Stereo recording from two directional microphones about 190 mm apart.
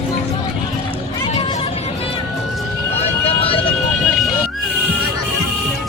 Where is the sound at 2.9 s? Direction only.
35° left (ahead or behind).